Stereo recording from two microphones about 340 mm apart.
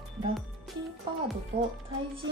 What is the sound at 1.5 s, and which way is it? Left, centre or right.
Speech, right.